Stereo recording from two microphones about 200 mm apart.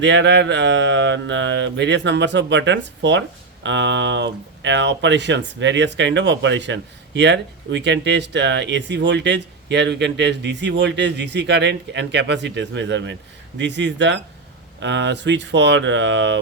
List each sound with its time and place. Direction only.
0.0 s speech: 60° right (ahead or behind)